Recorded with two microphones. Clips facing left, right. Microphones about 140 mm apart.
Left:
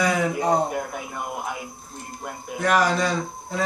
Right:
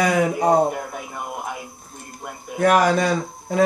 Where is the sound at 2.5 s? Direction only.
50° right (ahead or behind).